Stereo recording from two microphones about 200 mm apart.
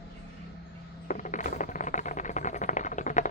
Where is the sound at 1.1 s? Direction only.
40° left (ahead or behind).